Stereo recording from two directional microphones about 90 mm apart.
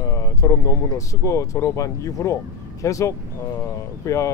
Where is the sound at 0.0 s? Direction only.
35° left (ahead or behind).